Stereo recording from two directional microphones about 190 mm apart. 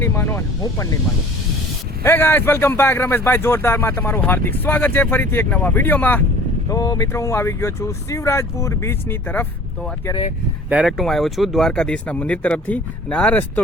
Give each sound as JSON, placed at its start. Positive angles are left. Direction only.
{"t": 0.0, "sound": "speech", "side_deg": 10}
{"t": 2.0, "sound": "speech", "side_deg": 10}
{"t": 10.7, "sound": "speech", "side_deg": -5}